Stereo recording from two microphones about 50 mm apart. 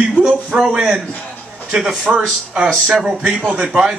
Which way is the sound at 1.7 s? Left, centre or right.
Centre.